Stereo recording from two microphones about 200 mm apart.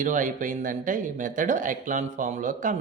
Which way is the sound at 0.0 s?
40° right (ahead or behind).